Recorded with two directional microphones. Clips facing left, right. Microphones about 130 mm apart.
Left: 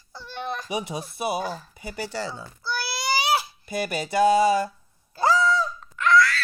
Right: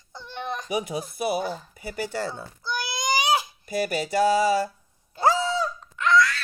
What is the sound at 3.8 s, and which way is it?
Music, 35° right (ahead or behind).